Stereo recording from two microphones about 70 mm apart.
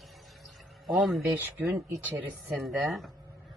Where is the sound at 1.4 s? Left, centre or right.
Right.